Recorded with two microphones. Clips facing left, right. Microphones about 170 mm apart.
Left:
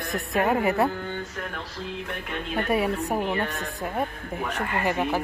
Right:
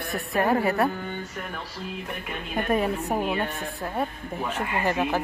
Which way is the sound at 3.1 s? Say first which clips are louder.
Right 1 dB; 10° right (ahead or behind).